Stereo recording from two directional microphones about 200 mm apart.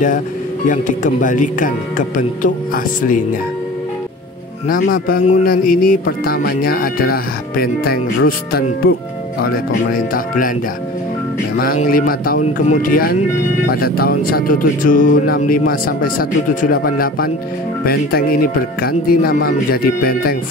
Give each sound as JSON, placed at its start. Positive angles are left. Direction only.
{"t": 0.7, "sound": "speech", "side_deg": 40}
{"t": 4.6, "sound": "music", "side_deg": 45}
{"t": 11.5, "sound": "music", "side_deg": 45}